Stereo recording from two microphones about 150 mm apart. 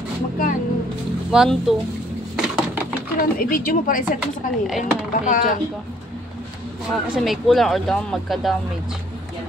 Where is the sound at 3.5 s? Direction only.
70° left (ahead or behind).